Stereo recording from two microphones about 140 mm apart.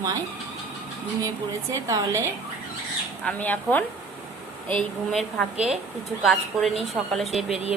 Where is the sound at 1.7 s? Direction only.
25° right (ahead or behind).